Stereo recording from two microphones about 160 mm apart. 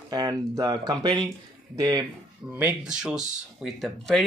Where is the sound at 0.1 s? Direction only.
25° right (ahead or behind).